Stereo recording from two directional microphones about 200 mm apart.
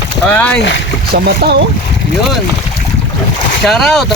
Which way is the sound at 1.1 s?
50° right (ahead or behind).